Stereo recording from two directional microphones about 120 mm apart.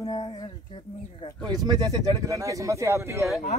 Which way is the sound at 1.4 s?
35° right (ahead or behind).